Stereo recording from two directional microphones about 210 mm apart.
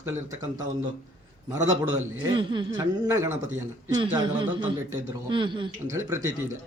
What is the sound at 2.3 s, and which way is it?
A man's voice, 20° right (ahead or behind).